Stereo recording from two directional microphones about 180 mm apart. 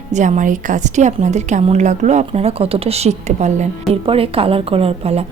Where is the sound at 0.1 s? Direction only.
45° right (ahead or behind).